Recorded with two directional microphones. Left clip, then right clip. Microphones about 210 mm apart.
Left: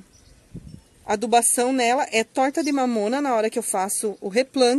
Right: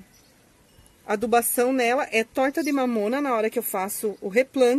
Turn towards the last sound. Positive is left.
turn(degrees=5)  # may be behind; listen again after turning